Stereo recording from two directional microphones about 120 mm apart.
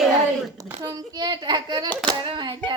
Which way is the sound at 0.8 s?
35° right (ahead or behind).